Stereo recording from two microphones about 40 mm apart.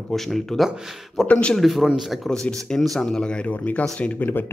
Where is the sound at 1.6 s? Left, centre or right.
Centre.